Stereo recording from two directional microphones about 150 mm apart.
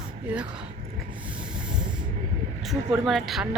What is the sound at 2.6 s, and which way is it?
Speech, centre (ahead or behind).